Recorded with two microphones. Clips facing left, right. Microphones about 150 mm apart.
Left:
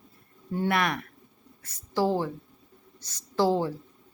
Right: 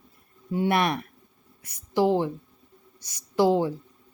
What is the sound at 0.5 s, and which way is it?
A woman's voice, 20° right (ahead or behind).